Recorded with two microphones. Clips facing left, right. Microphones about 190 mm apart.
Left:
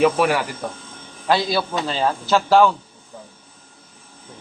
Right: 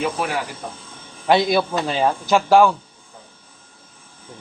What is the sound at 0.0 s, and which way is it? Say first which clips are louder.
Speech: left 7 dB; 70° left (ahead or behind).